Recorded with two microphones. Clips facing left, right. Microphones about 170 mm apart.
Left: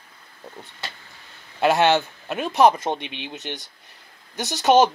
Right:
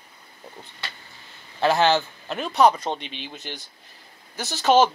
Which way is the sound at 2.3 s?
10° left (ahead or behind).